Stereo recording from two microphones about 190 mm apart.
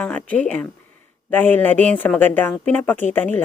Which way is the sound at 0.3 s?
10° left (ahead or behind).